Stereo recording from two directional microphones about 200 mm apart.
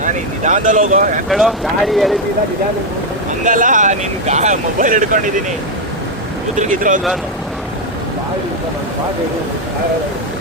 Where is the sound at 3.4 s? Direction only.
40° right (ahead or behind).